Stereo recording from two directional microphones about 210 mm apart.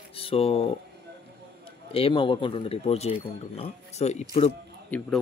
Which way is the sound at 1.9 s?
25° left (ahead or behind).